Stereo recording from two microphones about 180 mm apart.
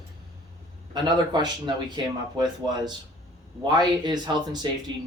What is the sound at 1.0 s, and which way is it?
Speech, 25° right (ahead or behind).